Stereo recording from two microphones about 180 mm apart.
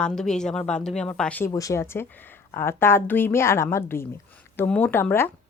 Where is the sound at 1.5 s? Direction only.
20° left (ahead or behind).